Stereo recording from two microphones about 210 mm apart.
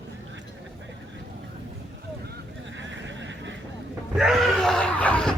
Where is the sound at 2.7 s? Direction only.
60° right (ahead or behind).